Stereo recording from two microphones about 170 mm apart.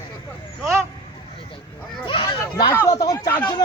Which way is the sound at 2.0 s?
30° left (ahead or behind).